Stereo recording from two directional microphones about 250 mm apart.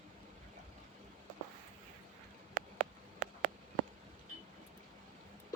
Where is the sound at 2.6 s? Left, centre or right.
Right.